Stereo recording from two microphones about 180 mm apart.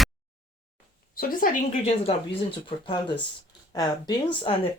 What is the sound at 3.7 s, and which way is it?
Speech, 20° left (ahead or behind).